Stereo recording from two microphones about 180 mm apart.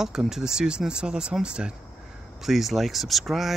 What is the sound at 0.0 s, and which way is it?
Speech, 5° right (ahead or behind).